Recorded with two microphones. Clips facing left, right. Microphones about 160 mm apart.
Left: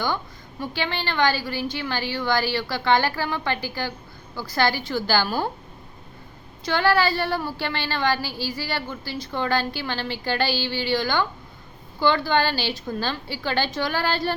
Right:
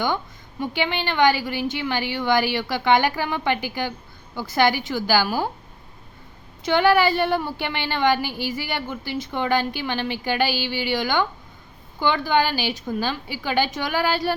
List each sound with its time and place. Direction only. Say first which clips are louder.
0.6 s a woman's voice: right 3 dB; 15° right (ahead or behind)
6.7 s a woman's voice: right 3 dB; 20° right (ahead or behind)